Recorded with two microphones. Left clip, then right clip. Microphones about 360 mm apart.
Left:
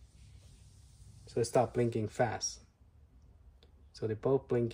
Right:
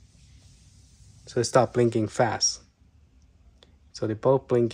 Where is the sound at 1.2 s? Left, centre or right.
Right.